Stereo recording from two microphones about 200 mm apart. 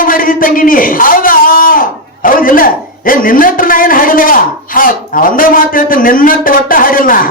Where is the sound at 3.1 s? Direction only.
45° left (ahead or behind).